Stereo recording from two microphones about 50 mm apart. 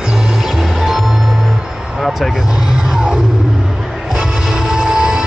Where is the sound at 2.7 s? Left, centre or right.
Centre.